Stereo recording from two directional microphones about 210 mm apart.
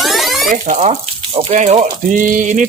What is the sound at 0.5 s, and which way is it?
Speech, 35° right (ahead or behind).